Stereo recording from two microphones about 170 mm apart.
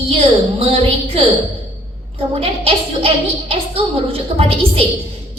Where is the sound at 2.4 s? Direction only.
35° right (ahead or behind).